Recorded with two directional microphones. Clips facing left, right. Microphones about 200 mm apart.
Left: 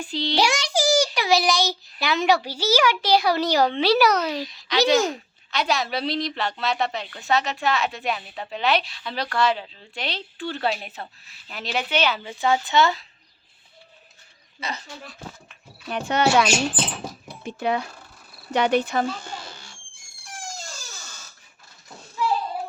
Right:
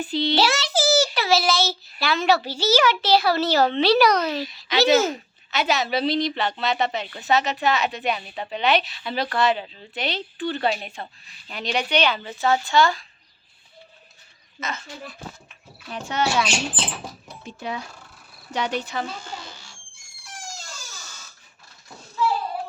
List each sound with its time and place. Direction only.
0.0 s a woman's voice: 5° right (ahead or behind)
0.3 s a child's voice: 15° left (ahead or behind)
4.4 s a woman's voice: 5° right (ahead or behind); by 13.1 s 20° left (ahead or behind)
14.6 s speech: 35° left (ahead or behind)
15.9 s speech: 65° left (ahead or behind)